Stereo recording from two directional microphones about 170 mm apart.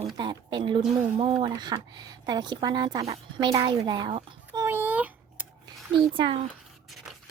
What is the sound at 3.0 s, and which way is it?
A child's voice, 35° right (ahead or behind).